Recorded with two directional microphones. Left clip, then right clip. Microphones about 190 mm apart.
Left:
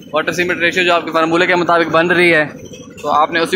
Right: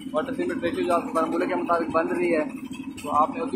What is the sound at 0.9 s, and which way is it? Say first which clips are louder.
Speech: left 10 dB; 40° left (ahead or behind).